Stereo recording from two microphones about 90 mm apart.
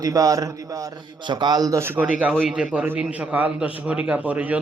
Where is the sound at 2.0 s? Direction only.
15° right (ahead or behind).